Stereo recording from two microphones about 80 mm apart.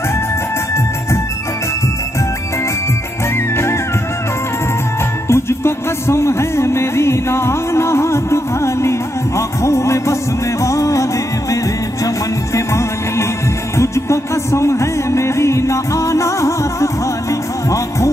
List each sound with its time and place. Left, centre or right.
5.3 s music: left
12.5 s music: left